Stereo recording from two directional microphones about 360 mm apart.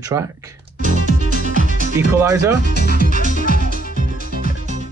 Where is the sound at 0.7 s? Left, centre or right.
Right.